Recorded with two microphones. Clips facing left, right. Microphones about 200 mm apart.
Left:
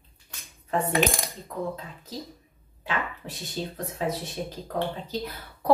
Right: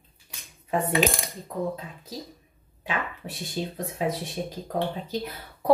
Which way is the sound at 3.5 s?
15° right (ahead or behind).